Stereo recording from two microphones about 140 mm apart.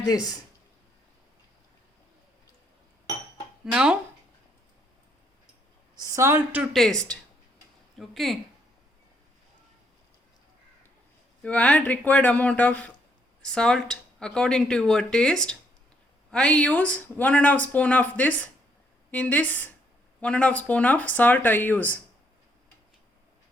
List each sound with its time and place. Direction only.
0.1 s speech: 30° left (ahead or behind)
3.7 s speech: 5° right (ahead or behind)
6.0 s a woman's voice: 20° right (ahead or behind)
6.7 s speech: 5° left (ahead or behind)
11.4 s speech: 10° left (ahead or behind)